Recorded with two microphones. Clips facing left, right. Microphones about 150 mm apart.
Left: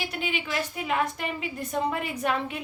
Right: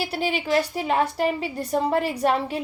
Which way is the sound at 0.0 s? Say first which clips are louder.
Right 6 dB; 35° right (ahead or behind).